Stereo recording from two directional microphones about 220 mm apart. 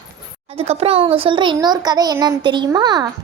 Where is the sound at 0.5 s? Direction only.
25° right (ahead or behind).